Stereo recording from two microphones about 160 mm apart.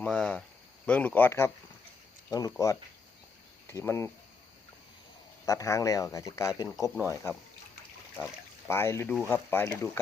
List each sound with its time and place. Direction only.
0.0 s speech: 5° left (ahead or behind)
5.5 s speech: 20° left (ahead or behind)